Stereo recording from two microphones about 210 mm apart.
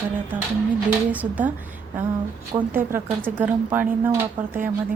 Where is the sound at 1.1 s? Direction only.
10° right (ahead or behind).